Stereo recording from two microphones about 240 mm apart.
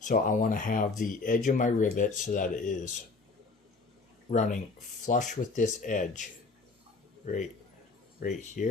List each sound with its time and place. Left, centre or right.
0.0 s speech: left
4.3 s speech: left
8.2 s speech: left